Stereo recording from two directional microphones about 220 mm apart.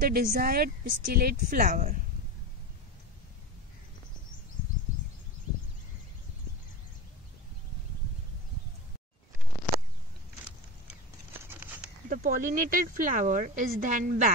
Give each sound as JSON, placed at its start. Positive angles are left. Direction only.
{"t": 0.0, "sound": "speech", "side_deg": -40}
{"t": 11.4, "sound": "patter", "side_deg": -10}
{"t": 12.1, "sound": "speech", "side_deg": -35}